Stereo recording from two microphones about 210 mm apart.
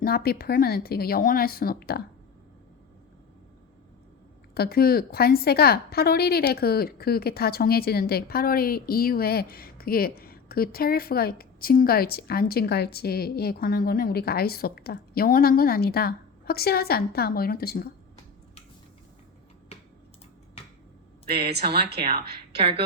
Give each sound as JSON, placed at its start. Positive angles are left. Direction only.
{"t": 0.0, "sound": "a woman's voice", "side_deg": 45}
{"t": 4.5, "sound": "a woman's voice", "side_deg": 45}
{"t": 20.6, "sound": "a sound", "side_deg": 25}
{"t": 21.2, "sound": "speech", "side_deg": -50}